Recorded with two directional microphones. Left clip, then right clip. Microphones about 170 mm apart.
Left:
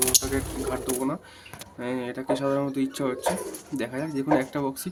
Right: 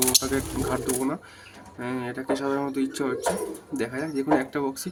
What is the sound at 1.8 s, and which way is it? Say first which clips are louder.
Speech: even; 5° left (ahead or behind).